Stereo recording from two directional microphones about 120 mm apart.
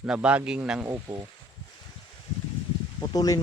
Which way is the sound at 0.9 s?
30° right (ahead or behind).